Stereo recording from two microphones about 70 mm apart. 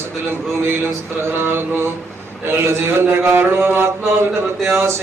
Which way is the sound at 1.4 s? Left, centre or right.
Right.